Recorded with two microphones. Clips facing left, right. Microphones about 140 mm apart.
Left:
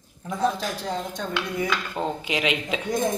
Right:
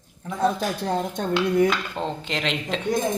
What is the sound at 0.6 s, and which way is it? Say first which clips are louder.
Speech: right 4 dB; 55° right (ahead or behind).